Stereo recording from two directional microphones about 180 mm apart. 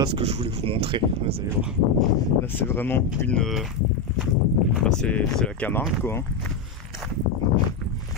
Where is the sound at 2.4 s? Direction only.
10° left (ahead or behind).